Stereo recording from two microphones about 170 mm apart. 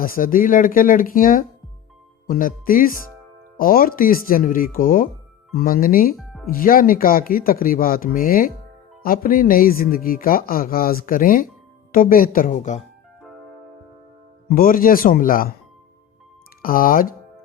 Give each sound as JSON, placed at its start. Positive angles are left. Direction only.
{"t": 0.0, "sound": "speech", "side_deg": 55}
{"t": 6.1, "sound": "music", "side_deg": 0}
{"t": 6.5, "sound": "speech", "side_deg": 55}
{"t": 14.5, "sound": "speech", "side_deg": 55}
{"t": 16.6, "sound": "speech", "side_deg": 55}